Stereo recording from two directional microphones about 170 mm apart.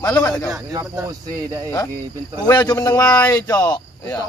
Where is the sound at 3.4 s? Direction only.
20° left (ahead or behind).